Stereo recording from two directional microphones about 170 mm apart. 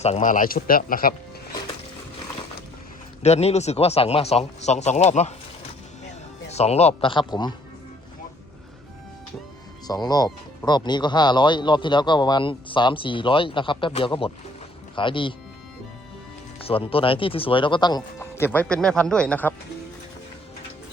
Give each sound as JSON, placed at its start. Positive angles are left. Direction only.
{"t": 0.0, "sound": "a man's voice", "side_deg": 45}
{"t": 3.2, "sound": "speech", "side_deg": 40}
{"t": 6.5, "sound": "speech", "side_deg": 40}
{"t": 9.8, "sound": "speech", "side_deg": 25}
{"t": 16.6, "sound": "speech", "side_deg": 35}